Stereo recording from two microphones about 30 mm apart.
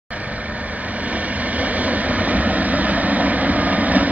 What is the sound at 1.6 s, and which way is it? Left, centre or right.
Vehicle, right.